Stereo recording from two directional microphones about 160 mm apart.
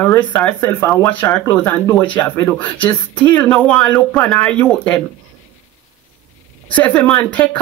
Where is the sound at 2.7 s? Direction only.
35° left (ahead or behind).